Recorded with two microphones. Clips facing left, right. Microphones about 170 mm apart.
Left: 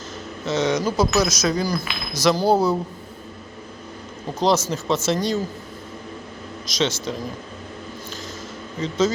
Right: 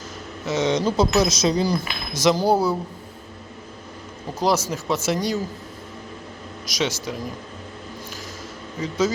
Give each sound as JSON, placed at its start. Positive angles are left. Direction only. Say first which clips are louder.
{"t": 0.4, "sound": "speech", "louder": "even", "side_deg": -20}
{"t": 2.2, "sound": "speech", "louder": "left 1 dB", "side_deg": -15}
{"t": 4.4, "sound": "speech", "louder": "left 2 dB", "side_deg": -10}
{"t": 6.7, "sound": "speech", "louder": "left 2 dB", "side_deg": -10}
{"t": 8.8, "sound": "speech", "louder": "left 2 dB", "side_deg": -10}